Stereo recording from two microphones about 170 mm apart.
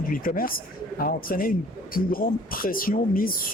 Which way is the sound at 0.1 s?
55° left (ahead or behind).